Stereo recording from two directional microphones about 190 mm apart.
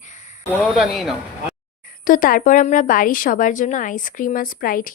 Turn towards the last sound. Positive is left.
turn(degrees=50)  # may be behind; listen again after turning